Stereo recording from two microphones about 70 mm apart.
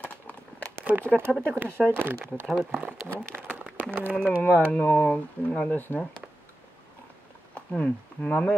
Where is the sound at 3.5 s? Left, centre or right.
Right.